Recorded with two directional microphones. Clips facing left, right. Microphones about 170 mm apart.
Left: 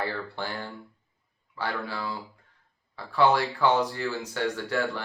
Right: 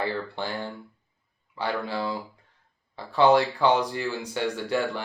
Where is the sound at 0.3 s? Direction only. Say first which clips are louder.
Right 3 dB; 20° right (ahead or behind).